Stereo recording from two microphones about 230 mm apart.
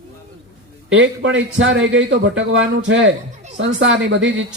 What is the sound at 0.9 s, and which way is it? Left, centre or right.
A man's voice, right.